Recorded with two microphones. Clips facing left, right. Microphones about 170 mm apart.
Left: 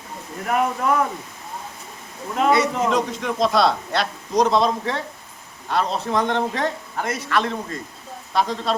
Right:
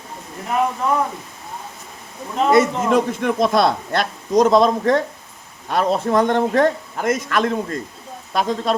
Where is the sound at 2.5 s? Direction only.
50° right (ahead or behind).